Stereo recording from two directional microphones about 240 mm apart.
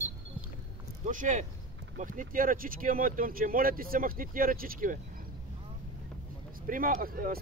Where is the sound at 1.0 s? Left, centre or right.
Right.